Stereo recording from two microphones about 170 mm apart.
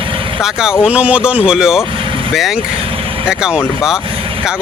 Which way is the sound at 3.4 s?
5° right (ahead or behind).